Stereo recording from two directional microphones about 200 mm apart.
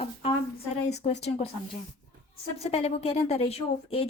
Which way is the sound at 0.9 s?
35° left (ahead or behind).